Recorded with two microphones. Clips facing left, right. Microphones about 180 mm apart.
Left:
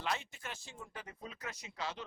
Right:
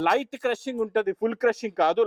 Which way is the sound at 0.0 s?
70° right (ahead or behind).